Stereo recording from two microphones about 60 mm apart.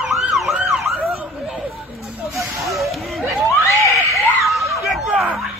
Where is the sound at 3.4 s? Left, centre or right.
Left.